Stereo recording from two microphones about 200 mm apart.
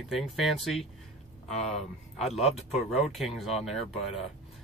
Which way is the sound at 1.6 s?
35° left (ahead or behind).